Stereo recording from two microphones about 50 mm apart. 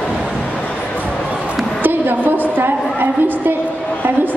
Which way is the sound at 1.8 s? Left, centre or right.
Right.